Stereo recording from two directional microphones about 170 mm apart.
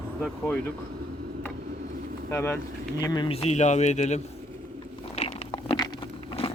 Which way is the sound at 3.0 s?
25° left (ahead or behind).